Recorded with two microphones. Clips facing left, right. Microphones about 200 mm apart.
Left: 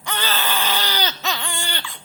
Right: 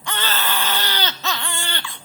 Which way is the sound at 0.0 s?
15° left (ahead or behind).